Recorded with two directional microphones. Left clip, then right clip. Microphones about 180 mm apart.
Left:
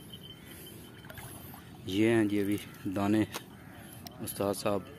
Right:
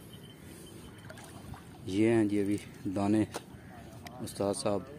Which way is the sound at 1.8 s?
5° right (ahead or behind).